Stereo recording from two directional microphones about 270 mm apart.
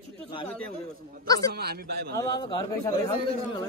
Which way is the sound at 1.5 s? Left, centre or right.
Right.